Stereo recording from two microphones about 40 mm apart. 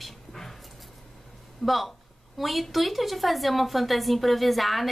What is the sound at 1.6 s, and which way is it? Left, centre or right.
Speech, centre.